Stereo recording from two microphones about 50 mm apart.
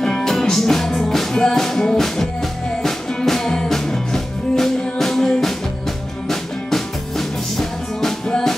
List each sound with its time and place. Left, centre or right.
0.0 s music: centre